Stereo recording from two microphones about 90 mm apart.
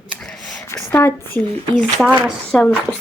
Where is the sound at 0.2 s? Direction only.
10° left (ahead or behind).